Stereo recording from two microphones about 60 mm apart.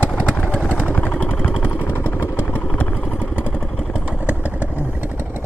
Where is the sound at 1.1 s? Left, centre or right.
Left.